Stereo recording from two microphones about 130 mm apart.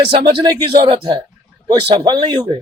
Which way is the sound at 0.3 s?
35° right (ahead or behind).